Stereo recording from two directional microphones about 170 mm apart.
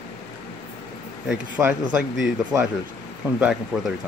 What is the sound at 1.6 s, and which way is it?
Speech, 20° right (ahead or behind).